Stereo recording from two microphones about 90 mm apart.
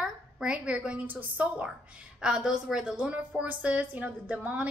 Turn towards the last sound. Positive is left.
turn(degrees=-15)  # may be behind; listen again after turning